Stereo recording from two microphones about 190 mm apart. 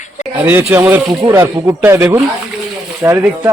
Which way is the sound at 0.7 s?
10° right (ahead or behind).